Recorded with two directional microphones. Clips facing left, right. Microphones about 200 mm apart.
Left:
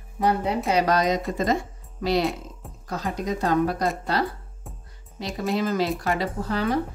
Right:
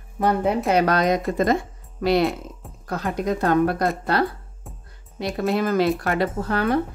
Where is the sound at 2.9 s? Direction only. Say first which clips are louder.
Right 3 dB; 55° right (ahead or behind).